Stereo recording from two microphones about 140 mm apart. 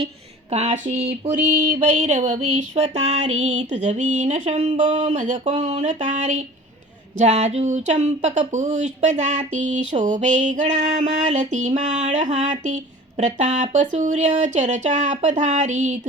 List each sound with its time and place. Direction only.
0.5 s speech: 50° right (ahead or behind)
1.3 s speech: 70° right (ahead or behind)